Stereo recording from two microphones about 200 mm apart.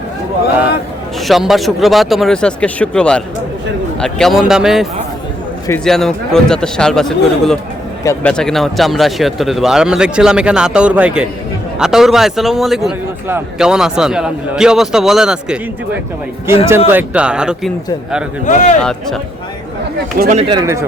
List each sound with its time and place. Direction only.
1.3 s a man's voice: centre (ahead or behind)
18.4 s speech: 35° left (ahead or behind)
18.8 s a man's voice: 5° left (ahead or behind)
20.1 s speech: 45° right (ahead or behind)
20.4 s speech: 20° right (ahead or behind)